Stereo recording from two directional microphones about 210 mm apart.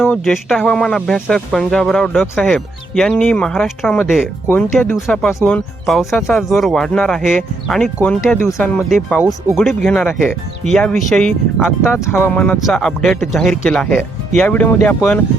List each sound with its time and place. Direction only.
0.0 s speech: centre (ahead or behind)